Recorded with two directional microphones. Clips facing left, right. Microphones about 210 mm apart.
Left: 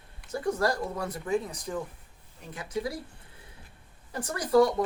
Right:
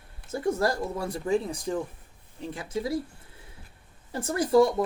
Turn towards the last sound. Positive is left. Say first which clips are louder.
# right 2 dB
turn(degrees=-25)  # may be behind; listen again after turning